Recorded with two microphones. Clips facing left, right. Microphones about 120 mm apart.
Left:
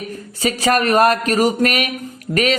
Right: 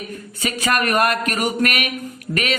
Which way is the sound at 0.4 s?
35° left (ahead or behind).